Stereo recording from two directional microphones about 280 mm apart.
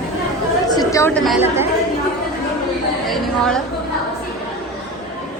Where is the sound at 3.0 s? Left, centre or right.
Centre.